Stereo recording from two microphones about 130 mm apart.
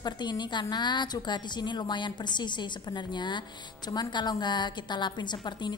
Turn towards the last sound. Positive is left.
turn(degrees=35)  # may be behind; listen again after turning